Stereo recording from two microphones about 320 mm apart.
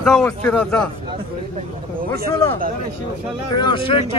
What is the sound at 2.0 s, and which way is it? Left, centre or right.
Speech, right.